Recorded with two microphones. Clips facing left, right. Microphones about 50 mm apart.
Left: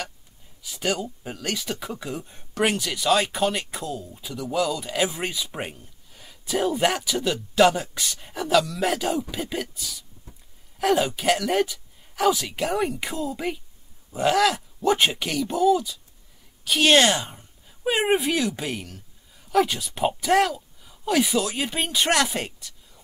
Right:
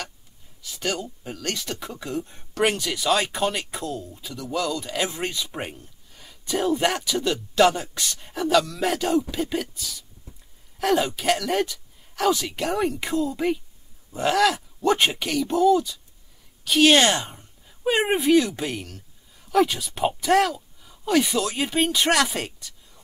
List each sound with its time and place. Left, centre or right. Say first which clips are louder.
0.6 s speech: left 2 dB; centre